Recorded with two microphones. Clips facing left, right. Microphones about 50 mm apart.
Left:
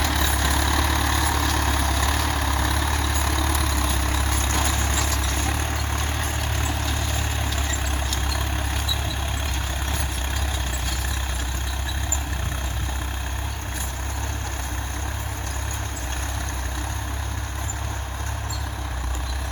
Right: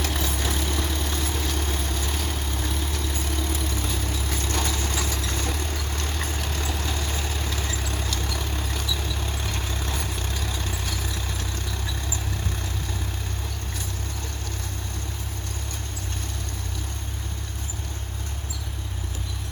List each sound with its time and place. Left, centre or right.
0.0 s vehicle: left
4.3 s vehicle: left
4.6 s vehicle: left